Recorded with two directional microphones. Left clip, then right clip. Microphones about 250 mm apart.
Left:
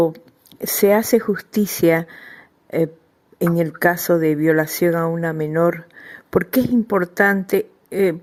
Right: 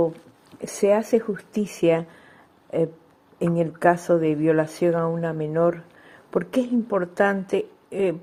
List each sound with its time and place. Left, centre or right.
0.6 s speech: left